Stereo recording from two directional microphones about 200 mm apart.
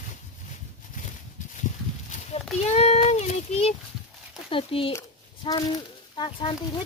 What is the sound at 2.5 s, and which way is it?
Child singing, 30° left (ahead or behind).